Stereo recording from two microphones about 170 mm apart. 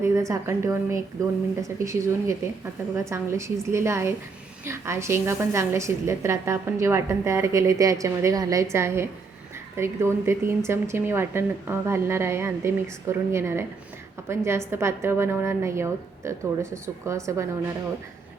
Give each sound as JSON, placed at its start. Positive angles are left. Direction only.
{"t": 0.0, "sound": "a woman's voice", "side_deg": -15}